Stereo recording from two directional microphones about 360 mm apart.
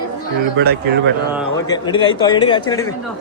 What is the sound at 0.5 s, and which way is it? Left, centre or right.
Speech, right.